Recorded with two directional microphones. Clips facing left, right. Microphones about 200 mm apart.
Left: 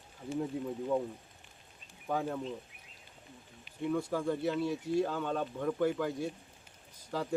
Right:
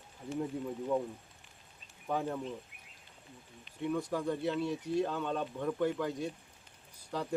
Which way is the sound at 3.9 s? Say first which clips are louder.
Left 1 dB; 5° left (ahead or behind).